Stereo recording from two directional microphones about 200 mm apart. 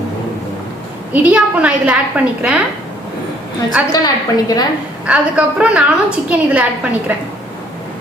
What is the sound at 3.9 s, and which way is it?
Speech, 20° left (ahead or behind).